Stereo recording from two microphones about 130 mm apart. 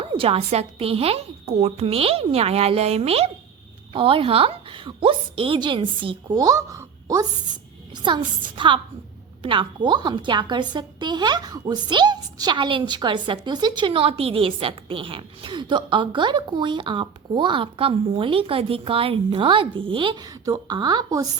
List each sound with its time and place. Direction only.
0.0 s a woman's voice: 45° right (ahead or behind); by 7.3 s 25° right (ahead or behind)
7.9 s a woman's voice: 35° right (ahead or behind)